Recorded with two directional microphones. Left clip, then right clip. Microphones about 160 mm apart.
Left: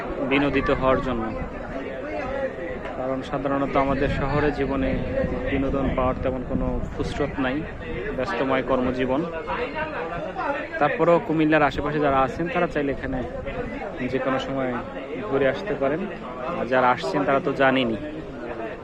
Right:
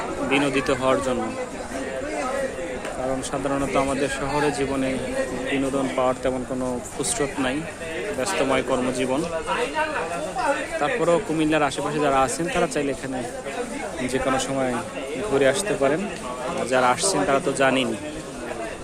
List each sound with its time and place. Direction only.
0.3 s a man's voice: 10° right (ahead or behind)
3.5 s a man's voice: 10° right (ahead or behind)
6.0 s speech: 30° right (ahead or behind)
7.0 s a man's voice: 20° right (ahead or behind)
10.8 s a man's voice: centre (ahead or behind)
14.1 s a man's voice: 25° right (ahead or behind)
16.6 s a man's voice: 15° right (ahead or behind)